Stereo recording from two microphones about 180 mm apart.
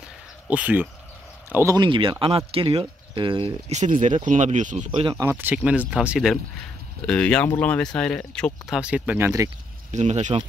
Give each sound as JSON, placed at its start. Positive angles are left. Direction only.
{"t": 0.5, "sound": "speech", "side_deg": -10}
{"t": 1.9, "sound": "speech", "side_deg": -30}
{"t": 5.2, "sound": "speech", "side_deg": -10}
{"t": 9.8, "sound": "speech", "side_deg": -40}